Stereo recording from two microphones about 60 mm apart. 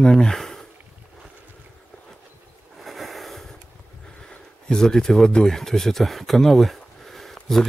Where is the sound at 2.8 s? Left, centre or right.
Centre.